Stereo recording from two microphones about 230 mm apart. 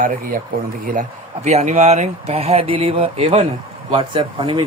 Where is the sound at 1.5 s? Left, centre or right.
Right.